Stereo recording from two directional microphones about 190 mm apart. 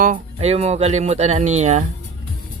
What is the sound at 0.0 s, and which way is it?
Speech, 40° right (ahead or behind).